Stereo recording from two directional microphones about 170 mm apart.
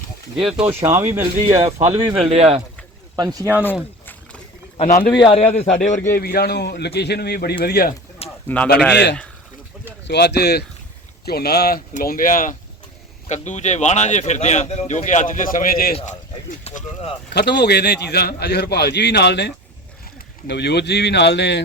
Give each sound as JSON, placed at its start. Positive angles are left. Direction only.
{"t": 0.3, "sound": "speech", "side_deg": -5}
{"t": 2.2, "sound": "speech", "side_deg": -35}
{"t": 3.2, "sound": "speech", "side_deg": -20}
{"t": 4.8, "sound": "speech", "side_deg": 45}
{"t": 5.1, "sound": "a man's voice", "side_deg": 30}
{"t": 6.1, "sound": "a man's voice", "side_deg": 65}
{"t": 8.4, "sound": "speech", "side_deg": 10}
{"t": 10.1, "sound": "a man's voice", "side_deg": 75}
{"t": 13.2, "sound": "speech", "side_deg": 45}
{"t": 16.6, "sound": "speech", "side_deg": 40}
{"t": 17.3, "sound": "a man's voice", "side_deg": 75}